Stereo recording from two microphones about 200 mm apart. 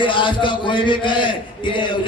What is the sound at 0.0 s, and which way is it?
A man's voice, 25° left (ahead or behind).